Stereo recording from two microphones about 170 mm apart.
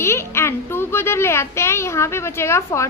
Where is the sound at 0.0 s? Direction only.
15° left (ahead or behind).